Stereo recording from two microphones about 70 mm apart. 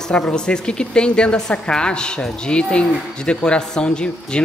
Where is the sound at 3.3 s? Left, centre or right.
Centre.